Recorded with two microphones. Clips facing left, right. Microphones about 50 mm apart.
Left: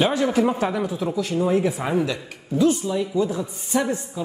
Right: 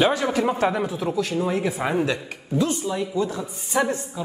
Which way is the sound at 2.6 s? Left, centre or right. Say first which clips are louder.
Left 4 dB; centre.